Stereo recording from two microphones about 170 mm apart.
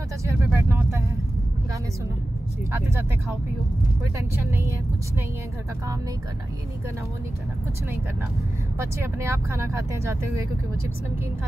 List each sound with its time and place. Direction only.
0.2 s vehicle: 15° right (ahead or behind)
2.7 s speech: 15° right (ahead or behind)
4.5 s speech: 15° right (ahead or behind)
8.7 s speech: 15° right (ahead or behind)